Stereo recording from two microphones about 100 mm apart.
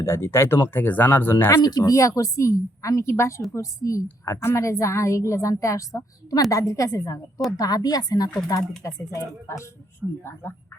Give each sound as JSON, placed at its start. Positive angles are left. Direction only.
{"t": 0.0, "sound": "speech", "side_deg": 25}
{"t": 1.6, "sound": "a woman's voice", "side_deg": 35}
{"t": 8.8, "sound": "speech", "side_deg": 30}
{"t": 10.0, "sound": "speech", "side_deg": -15}